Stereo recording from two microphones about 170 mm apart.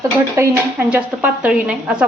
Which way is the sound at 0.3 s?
10° right (ahead or behind).